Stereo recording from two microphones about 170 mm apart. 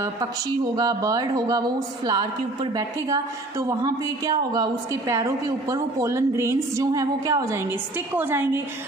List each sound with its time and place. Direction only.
0.8 s a woman's voice: 20° right (ahead or behind)